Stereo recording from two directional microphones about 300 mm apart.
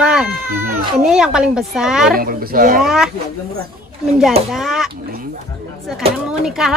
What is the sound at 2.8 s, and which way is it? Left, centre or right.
Speech, centre.